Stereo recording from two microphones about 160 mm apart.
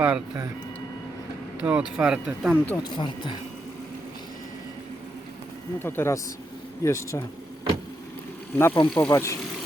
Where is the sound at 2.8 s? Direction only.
30° left (ahead or behind).